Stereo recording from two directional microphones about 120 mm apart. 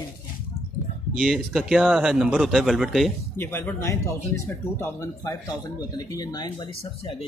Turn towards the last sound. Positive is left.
turn(degrees=35)  # may be behind; listen again after turning